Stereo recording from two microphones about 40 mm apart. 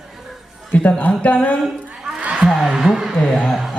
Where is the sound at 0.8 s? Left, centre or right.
Left.